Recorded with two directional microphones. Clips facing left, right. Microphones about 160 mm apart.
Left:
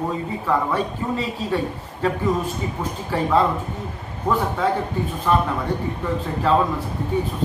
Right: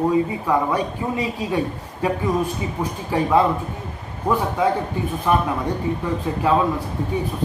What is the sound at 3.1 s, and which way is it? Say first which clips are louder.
Speech: right 2 dB; 15° right (ahead or behind).